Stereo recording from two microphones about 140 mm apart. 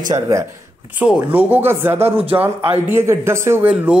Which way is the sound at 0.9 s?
10° right (ahead or behind).